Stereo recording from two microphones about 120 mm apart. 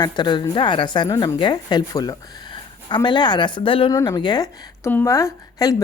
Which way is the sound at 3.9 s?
25° left (ahead or behind).